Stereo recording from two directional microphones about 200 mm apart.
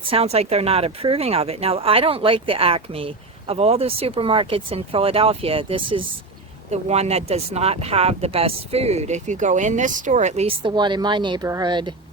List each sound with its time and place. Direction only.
0.1 s speech: 30° right (ahead or behind)